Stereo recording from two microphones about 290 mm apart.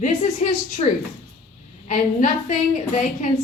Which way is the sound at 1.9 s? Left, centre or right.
Left.